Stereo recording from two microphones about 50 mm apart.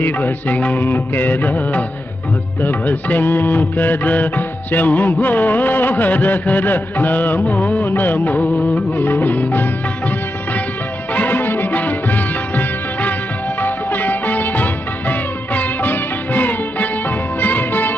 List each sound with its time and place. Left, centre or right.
0.0 s music: left
11.1 s music of bollywood: left
13.6 s music: left